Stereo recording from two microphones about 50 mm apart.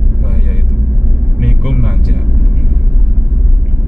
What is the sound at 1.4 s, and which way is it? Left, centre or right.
Vehicle, centre.